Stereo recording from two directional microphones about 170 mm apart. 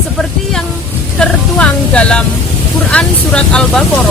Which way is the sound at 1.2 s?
5° left (ahead or behind).